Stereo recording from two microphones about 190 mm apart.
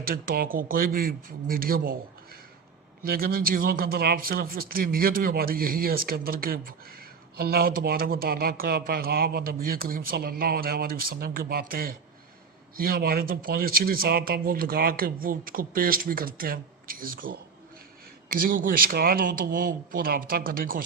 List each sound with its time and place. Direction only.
0.1 s speech: 50° right (ahead or behind)
3.1 s speech: 50° right (ahead or behind)
18.4 s speech: 50° right (ahead or behind)